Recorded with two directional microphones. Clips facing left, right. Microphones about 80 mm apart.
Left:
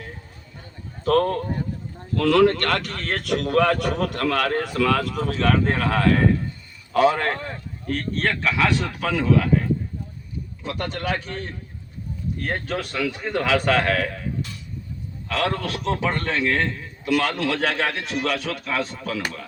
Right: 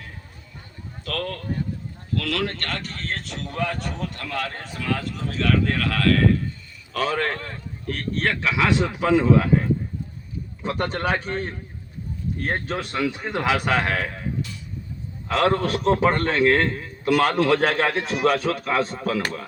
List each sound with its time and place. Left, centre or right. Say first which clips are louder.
1.0 s speech: left 9 dB; left
5.6 s speech: left 1 dB; left
6.9 s a man's voice: left 5 dB; centre
7.9 s a man's voice: left 1 dB; centre
15.3 s a man's voice: right 4 dB; right